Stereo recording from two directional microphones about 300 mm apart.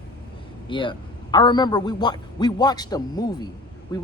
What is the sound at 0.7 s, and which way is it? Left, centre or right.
A man's voice, centre.